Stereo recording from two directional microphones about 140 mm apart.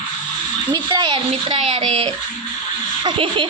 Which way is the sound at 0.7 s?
30° right (ahead or behind).